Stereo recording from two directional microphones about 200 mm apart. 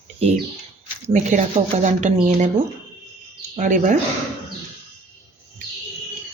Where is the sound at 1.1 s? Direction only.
35° right (ahead or behind).